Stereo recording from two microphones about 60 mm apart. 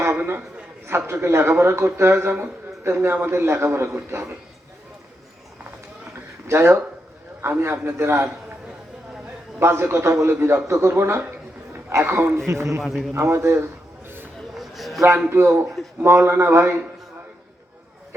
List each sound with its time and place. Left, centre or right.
0.9 s a man's voice: right
6.5 s a man's voice: right
9.6 s a man's voice: right
11.2 s a sound: right
11.9 s a man's voice: right
12.5 s a man's voice: right
12.8 s speech: centre
13.1 s a man's voice: right
14.5 s a sound: centre
15.3 s a man's voice: right